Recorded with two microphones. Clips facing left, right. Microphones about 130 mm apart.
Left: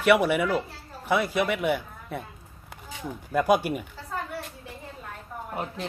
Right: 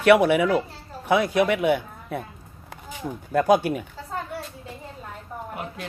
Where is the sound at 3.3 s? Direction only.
10° left (ahead or behind).